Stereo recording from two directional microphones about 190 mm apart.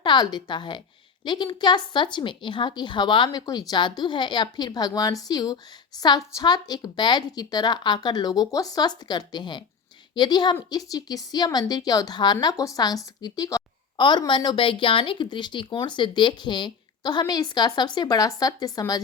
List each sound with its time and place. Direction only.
0.0 s a woman's voice: 25° left (ahead or behind)